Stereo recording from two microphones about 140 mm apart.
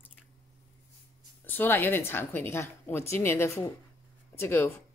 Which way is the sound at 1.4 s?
15° left (ahead or behind).